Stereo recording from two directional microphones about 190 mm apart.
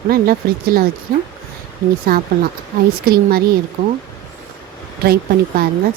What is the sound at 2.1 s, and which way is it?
Speech, 50° right (ahead or behind).